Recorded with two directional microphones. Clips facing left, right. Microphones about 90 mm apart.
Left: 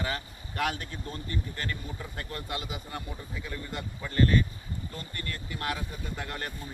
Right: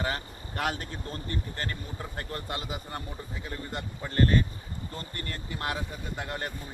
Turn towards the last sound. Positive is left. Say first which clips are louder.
# right 2 dB
turn(degrees=-20)  # may be behind; listen again after turning